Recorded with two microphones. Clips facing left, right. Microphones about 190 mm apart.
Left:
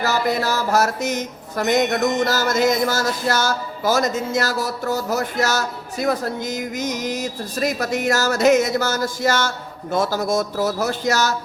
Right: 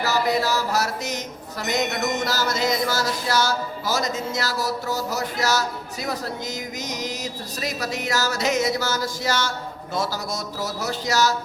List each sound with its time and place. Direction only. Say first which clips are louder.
0.0 s speech: left 1 dB; 50° left (ahead or behind)